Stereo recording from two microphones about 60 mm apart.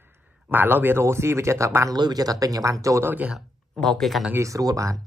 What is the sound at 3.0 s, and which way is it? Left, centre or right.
Speech, right.